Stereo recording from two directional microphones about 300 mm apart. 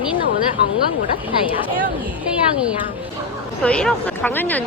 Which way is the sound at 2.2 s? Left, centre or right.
Centre.